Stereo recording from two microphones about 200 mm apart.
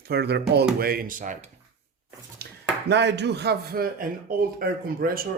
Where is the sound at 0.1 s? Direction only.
55° right (ahead or behind); by 1.5 s 40° right (ahead or behind).